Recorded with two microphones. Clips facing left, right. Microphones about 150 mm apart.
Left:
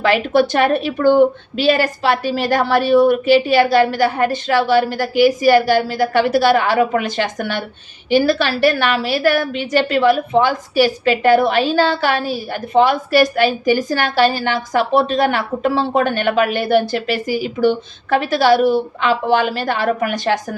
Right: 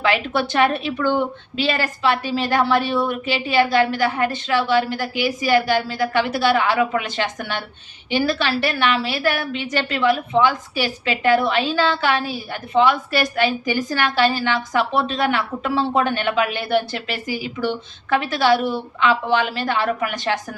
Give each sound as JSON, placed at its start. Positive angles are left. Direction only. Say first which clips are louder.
{"t": 0.0, "sound": "a woman's voice", "louder": "left 6 dB", "side_deg": 40}